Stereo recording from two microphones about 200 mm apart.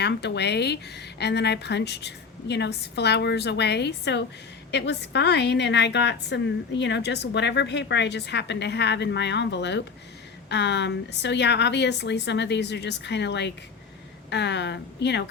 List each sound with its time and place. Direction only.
0.0 s a woman's voice: 60° left (ahead or behind)